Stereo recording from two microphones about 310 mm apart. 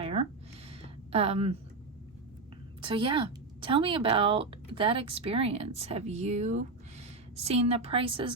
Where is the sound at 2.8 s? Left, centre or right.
Centre.